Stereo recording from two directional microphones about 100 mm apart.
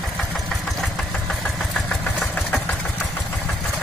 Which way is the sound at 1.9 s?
5° left (ahead or behind).